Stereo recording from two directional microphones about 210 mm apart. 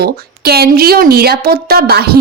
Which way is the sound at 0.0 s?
50° right (ahead or behind).